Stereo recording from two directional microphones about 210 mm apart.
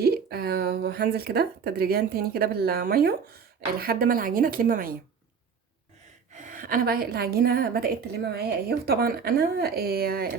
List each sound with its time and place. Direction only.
0.0 s speech: 45° right (ahead or behind)
6.3 s speech: 40° right (ahead or behind)